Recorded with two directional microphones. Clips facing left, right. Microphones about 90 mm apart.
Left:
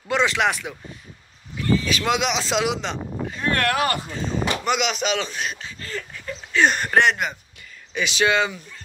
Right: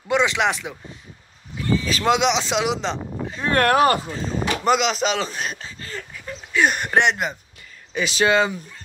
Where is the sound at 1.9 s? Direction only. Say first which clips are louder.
Right 3 dB; 30° right (ahead or behind).